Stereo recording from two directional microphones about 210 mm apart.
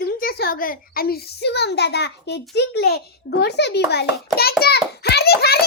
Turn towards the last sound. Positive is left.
turn(degrees=50)  # may be behind; listen again after turning